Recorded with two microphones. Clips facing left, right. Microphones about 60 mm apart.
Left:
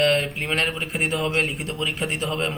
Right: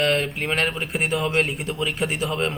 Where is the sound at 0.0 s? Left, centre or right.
Centre.